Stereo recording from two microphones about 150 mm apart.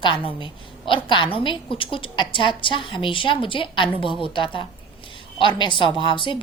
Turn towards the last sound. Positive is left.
turn(degrees=35)  # may be behind; listen again after turning